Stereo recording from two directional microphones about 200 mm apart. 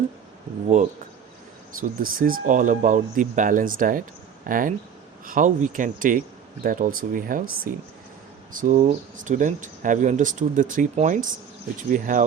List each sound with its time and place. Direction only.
2.0 s speech: 45° right (ahead or behind)